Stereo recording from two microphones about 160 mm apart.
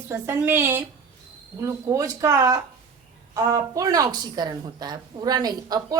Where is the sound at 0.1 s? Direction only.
15° right (ahead or behind).